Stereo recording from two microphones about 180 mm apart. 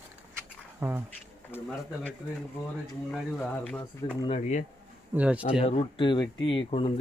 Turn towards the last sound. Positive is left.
turn(degrees=30)  # may be behind; listen again after turning